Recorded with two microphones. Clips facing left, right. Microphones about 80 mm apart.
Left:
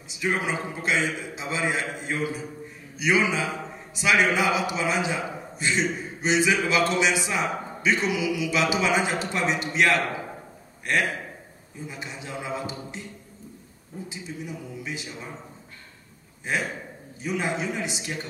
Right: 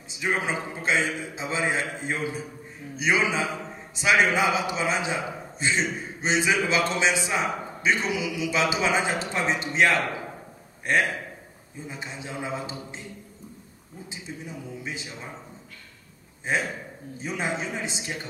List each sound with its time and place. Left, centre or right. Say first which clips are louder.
0.2 s a man's voice: even; right
11.9 s a man's voice: right 1 dB; right
14.0 s a man's voice: left 2 dB; right
17.2 s a man's voice: left 2 dB; right